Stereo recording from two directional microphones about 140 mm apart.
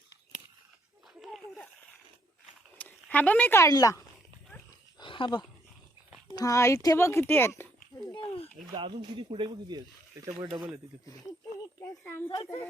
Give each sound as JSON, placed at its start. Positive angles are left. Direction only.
{"t": 2.7, "sound": "speech", "side_deg": 10}
{"t": 4.9, "sound": "wild animals", "side_deg": 35}
{"t": 6.3, "sound": "a child's voice", "side_deg": 25}
{"t": 8.7, "sound": "speech", "side_deg": -35}
{"t": 11.8, "sound": "a child's voice", "side_deg": 15}